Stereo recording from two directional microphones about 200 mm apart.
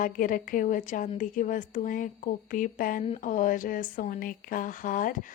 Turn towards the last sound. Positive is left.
turn(degrees=40)  # may be behind; listen again after turning